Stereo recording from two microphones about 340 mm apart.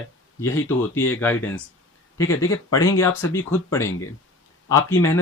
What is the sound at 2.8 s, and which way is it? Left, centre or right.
Speech, centre.